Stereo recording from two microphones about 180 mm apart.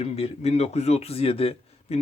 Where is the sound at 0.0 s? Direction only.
35° left (ahead or behind).